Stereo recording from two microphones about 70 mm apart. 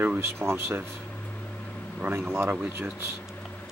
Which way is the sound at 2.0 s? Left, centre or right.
Right.